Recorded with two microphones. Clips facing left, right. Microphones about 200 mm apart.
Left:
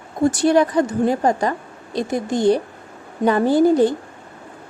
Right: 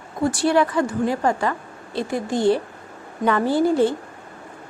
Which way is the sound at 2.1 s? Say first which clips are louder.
Left 2 dB; 40° left (ahead or behind).